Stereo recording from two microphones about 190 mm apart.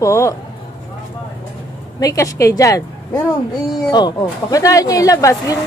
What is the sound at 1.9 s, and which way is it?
Speech, 15° left (ahead or behind).